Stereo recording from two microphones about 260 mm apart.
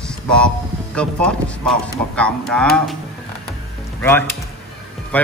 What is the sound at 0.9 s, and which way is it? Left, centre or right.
Speech, centre.